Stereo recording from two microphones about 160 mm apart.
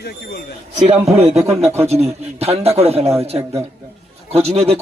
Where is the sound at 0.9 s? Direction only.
40° right (ahead or behind).